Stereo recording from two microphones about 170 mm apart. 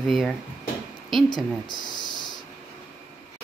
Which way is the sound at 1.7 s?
25° left (ahead or behind).